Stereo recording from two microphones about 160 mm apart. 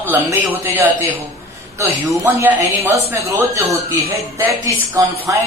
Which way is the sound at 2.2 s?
15° right (ahead or behind).